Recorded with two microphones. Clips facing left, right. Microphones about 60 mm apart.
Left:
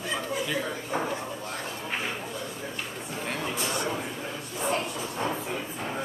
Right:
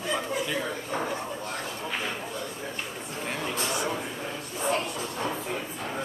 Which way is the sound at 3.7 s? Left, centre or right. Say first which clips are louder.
Even; centre.